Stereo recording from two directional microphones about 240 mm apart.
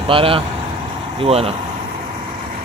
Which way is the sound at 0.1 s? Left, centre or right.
Right.